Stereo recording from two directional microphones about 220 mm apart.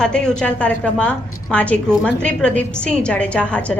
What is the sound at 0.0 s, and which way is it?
A woman's voice, 5° left (ahead or behind).